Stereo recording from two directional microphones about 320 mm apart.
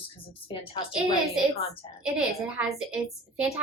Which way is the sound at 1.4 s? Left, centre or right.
Centre.